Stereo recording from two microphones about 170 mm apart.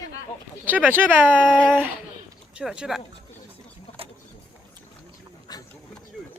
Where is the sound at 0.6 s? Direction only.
10° right (ahead or behind).